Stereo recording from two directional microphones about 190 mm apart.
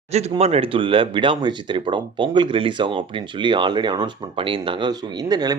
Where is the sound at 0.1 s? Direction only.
35° right (ahead or behind).